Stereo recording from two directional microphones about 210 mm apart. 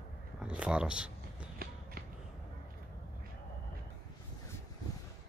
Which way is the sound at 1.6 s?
45° right (ahead or behind).